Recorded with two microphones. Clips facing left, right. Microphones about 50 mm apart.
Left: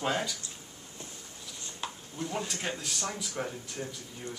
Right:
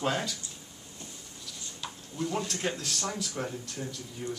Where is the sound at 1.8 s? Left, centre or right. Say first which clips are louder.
Left 3 dB; left.